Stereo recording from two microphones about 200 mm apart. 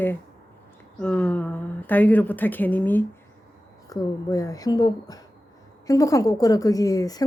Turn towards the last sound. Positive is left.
turn(degrees=15)  # may be behind; listen again after turning